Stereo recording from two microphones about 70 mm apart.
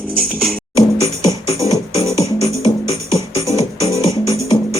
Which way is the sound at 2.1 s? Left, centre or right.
Left.